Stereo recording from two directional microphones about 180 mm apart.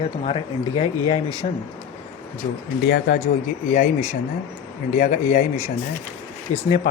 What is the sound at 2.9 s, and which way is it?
Speech, 65° left (ahead or behind).